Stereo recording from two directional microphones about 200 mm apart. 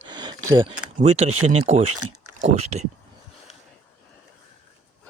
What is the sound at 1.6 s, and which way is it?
Speech, 30° right (ahead or behind).